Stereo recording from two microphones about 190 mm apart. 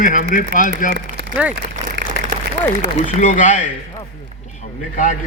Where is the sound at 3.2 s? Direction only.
40° left (ahead or behind).